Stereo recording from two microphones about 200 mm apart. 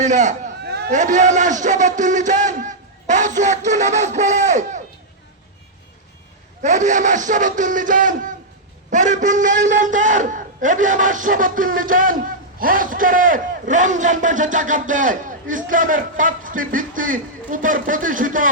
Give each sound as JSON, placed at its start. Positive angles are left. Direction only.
{"t": 0.0, "sound": "speech", "side_deg": -35}
{"t": 0.6, "sound": "a sound", "side_deg": -55}
{"t": 0.9, "sound": "a man's voice", "side_deg": -40}
{"t": 6.6, "sound": "a man's voice", "side_deg": -35}